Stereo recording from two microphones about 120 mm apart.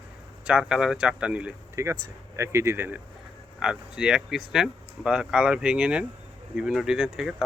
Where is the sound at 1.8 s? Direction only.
25° right (ahead or behind).